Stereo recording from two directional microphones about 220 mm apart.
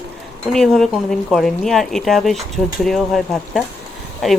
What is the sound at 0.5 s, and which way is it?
Speech, centre (ahead or behind).